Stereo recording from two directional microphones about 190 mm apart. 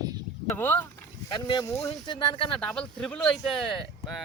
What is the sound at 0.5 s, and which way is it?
Speech, 10° left (ahead or behind).